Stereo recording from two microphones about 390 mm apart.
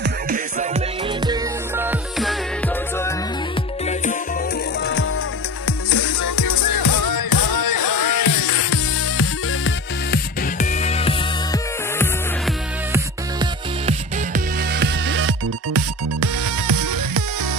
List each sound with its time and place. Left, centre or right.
0.0 s music: centre
3.8 s music: centre
5.7 s music: left
6.2 s music: left; by 12.5 s centre
12.9 s music: centre; by 16.3 s right
16.6 s music: right